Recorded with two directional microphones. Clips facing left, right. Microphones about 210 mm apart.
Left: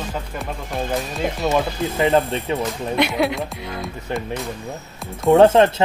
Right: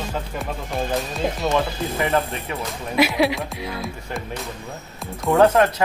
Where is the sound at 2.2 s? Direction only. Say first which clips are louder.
Left 6 dB; 30° left (ahead or behind).